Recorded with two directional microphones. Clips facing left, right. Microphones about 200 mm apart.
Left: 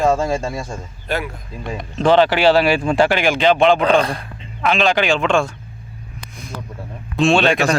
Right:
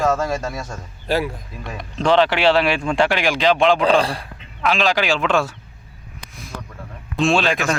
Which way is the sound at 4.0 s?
30° right (ahead or behind).